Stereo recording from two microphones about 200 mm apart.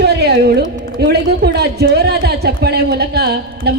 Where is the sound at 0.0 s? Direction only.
55° right (ahead or behind).